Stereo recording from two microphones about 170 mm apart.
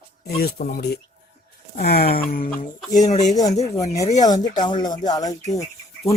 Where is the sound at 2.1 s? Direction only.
55° left (ahead or behind).